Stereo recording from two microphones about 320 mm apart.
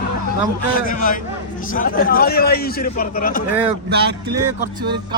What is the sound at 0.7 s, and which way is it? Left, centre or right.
A man's voice, left.